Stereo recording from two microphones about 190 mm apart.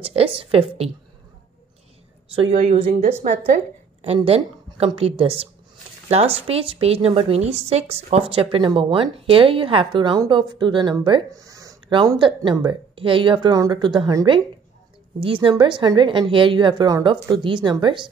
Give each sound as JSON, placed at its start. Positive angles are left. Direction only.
{"t": 0.0, "sound": "a woman's voice", "side_deg": -30}
{"t": 2.3, "sound": "a woman's voice", "side_deg": -40}